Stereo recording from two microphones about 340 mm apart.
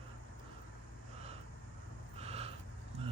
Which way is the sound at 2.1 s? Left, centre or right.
Centre.